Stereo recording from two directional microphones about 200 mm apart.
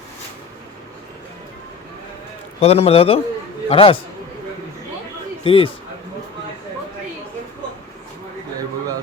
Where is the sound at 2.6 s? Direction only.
30° left (ahead or behind).